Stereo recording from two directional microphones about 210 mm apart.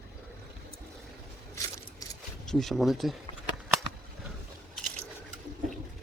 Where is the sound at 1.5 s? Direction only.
15° left (ahead or behind).